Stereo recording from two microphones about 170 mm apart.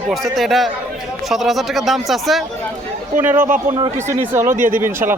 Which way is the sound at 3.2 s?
10° right (ahead or behind).